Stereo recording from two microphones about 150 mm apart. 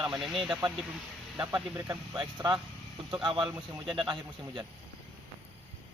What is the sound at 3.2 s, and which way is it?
Speech, 30° right (ahead or behind).